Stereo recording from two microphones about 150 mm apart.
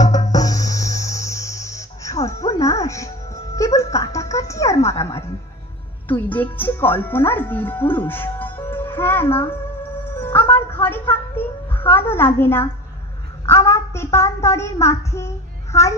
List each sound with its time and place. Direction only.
0.3 s music: 25° left (ahead or behind)
6.0 s speech: 10° left (ahead or behind)
9.5 s music: 15° left (ahead or behind)
10.7 s a woman's voice: 15° left (ahead or behind)